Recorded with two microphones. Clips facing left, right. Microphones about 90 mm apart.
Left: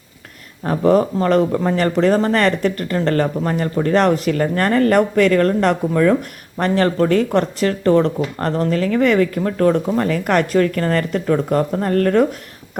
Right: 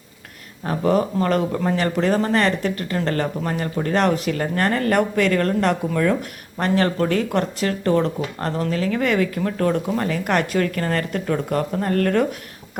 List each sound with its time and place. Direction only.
0.6 s speech: 35° left (ahead or behind)